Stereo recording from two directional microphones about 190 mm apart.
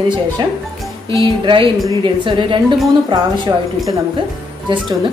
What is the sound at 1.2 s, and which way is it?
Speech, 25° right (ahead or behind).